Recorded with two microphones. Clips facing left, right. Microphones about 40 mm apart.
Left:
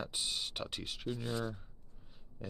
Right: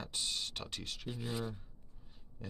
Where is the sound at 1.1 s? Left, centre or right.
Centre.